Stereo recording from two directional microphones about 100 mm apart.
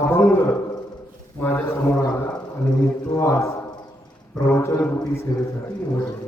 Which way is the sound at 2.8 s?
35° left (ahead or behind).